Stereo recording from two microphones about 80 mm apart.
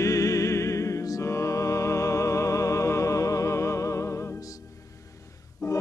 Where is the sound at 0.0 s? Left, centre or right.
Left.